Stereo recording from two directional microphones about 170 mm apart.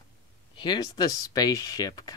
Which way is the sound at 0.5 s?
25° left (ahead or behind).